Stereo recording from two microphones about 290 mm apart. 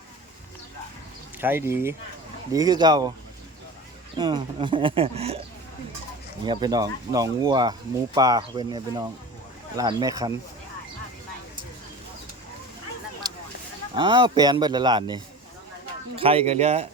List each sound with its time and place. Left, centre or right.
1.4 s speech: centre
4.2 s speech: centre
6.4 s speech: centre
13.2 s a sound: centre
13.9 s speech: centre